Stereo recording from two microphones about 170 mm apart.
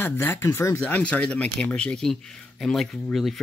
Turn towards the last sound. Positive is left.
turn(degrees=0)  # may be behind; listen again after turning